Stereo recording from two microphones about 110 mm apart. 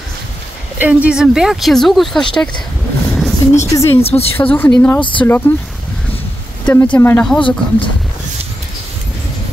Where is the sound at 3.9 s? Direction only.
65° left (ahead or behind).